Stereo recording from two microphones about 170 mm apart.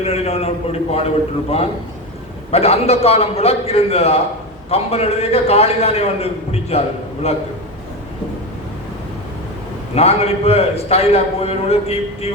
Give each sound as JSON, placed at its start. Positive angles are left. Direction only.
{"t": 0.0, "sound": "a man's voice", "side_deg": 35}
{"t": 2.5, "sound": "a man's voice", "side_deg": 35}
{"t": 9.9, "sound": "a man's voice", "side_deg": 35}